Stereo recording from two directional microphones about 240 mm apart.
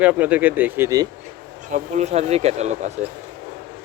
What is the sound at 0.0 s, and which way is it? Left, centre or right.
Speech, centre.